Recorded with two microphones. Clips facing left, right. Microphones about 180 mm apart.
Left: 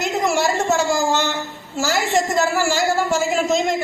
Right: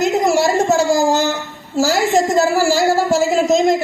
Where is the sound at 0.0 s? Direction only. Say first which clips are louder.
Right 5 dB; 35° right (ahead or behind).